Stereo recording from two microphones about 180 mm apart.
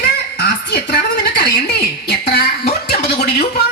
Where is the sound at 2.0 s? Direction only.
60° left (ahead or behind).